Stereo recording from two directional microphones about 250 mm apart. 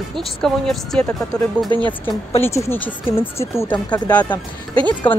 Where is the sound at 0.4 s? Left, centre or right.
Centre.